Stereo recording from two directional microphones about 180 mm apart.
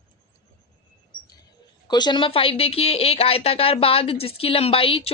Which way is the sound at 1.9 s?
25° left (ahead or behind).